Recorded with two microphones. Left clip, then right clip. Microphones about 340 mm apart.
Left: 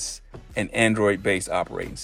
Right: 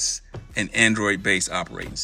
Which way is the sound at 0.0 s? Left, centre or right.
Centre.